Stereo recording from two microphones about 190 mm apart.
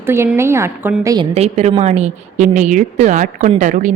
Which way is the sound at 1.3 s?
35° right (ahead or behind).